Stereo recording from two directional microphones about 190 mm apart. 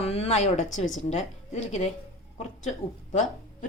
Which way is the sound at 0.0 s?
35° left (ahead or behind).